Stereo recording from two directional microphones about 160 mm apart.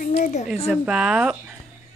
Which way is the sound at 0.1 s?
45° left (ahead or behind).